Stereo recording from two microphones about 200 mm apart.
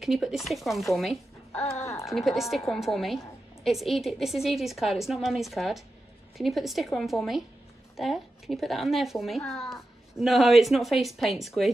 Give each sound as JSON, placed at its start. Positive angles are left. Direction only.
{"t": 0.0, "sound": "a woman's voice", "side_deg": 0}
{"t": 1.6, "sound": "speech", "side_deg": 30}
{"t": 2.0, "sound": "a woman's voice", "side_deg": 0}